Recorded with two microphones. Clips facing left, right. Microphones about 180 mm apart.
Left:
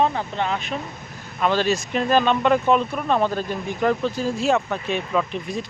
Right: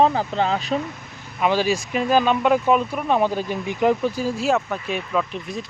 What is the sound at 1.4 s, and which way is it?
Speech, 10° right (ahead or behind).